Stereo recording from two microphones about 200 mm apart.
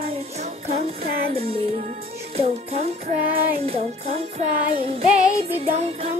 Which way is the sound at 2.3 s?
30° right (ahead or behind).